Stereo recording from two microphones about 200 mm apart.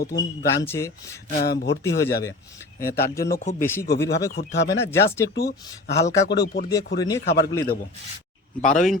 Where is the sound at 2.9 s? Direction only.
50° left (ahead or behind).